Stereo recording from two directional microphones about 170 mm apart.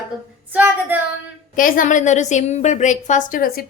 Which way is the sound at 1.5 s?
55° left (ahead or behind).